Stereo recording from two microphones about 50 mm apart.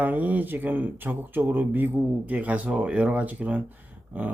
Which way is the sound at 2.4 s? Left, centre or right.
Right.